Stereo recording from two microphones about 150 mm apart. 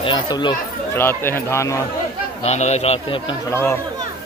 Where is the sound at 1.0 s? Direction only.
15° left (ahead or behind).